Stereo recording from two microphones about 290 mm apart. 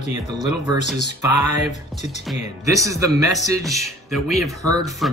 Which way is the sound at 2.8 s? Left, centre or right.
Centre.